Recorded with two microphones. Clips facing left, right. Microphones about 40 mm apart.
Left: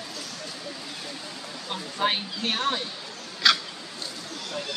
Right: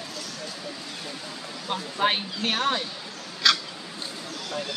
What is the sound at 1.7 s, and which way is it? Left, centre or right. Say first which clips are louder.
Speech: right 2 dB; centre.